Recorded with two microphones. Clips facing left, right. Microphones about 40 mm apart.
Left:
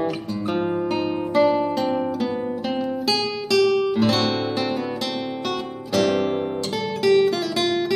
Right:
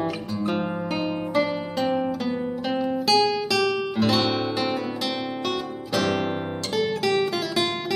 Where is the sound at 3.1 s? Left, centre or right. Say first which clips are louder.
Right 3 dB; centre.